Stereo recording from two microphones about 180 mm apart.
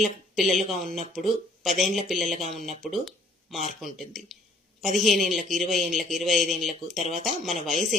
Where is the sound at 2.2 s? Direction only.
40° right (ahead or behind).